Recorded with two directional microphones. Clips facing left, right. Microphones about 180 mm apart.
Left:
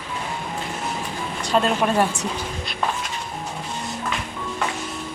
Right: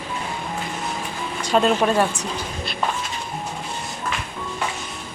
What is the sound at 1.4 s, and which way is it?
Speech, centre (ahead or behind).